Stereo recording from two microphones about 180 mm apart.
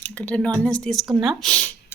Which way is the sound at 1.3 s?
Centre (ahead or behind).